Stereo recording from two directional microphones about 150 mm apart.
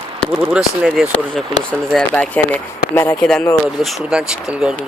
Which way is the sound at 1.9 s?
5° left (ahead or behind).